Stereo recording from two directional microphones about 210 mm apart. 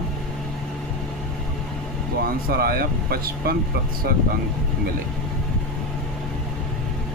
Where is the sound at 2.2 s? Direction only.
45° right (ahead or behind).